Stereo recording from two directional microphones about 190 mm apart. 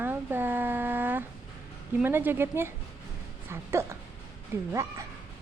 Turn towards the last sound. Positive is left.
turn(degrees=-15)  # may be behind; listen again after turning